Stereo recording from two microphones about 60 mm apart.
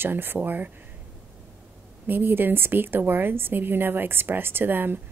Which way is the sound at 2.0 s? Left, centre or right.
Right.